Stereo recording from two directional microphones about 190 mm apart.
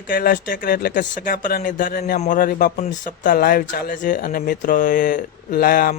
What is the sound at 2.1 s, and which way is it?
Speech, 40° left (ahead or behind).